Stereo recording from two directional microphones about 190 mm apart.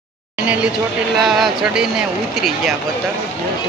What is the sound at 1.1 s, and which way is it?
Speech, centre (ahead or behind).